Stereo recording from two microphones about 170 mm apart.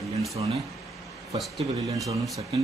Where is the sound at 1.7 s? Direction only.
20° right (ahead or behind).